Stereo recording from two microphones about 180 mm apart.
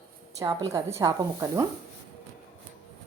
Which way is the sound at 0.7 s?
15° right (ahead or behind).